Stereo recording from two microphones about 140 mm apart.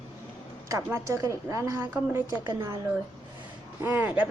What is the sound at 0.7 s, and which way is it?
A woman's voice, 20° right (ahead or behind).